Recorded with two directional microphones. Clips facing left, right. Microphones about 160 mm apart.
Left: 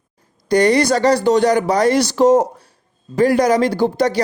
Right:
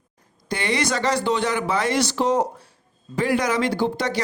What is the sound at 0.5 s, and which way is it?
Speech, 40° left (ahead or behind).